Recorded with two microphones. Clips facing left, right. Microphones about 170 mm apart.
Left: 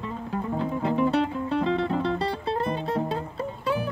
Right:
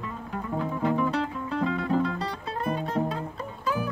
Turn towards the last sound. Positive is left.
turn(degrees=30)  # may be behind; listen again after turning